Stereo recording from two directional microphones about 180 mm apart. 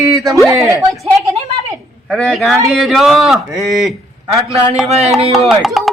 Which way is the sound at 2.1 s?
Centre (ahead or behind).